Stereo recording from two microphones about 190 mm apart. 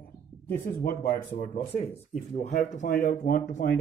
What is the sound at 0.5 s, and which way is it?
Speech, 55° left (ahead or behind).